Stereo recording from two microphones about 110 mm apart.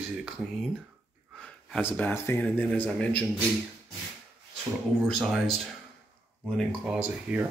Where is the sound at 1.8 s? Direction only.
20° left (ahead or behind).